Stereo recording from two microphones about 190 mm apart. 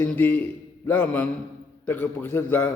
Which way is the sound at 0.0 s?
10° left (ahead or behind).